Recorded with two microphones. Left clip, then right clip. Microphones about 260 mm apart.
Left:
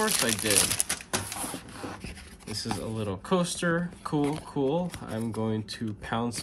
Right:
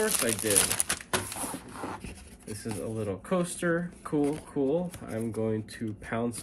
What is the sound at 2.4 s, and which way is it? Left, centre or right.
Speech, centre.